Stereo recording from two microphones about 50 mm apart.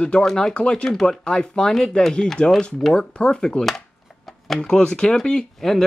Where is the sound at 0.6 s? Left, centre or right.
Left.